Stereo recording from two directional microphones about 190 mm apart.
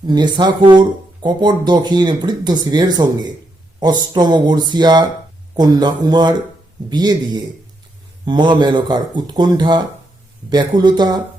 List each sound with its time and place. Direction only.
0.1 s speech: 25° right (ahead or behind)